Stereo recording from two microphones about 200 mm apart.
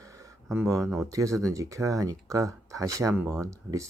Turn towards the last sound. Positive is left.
turn(degrees=-15)  # may be behind; listen again after turning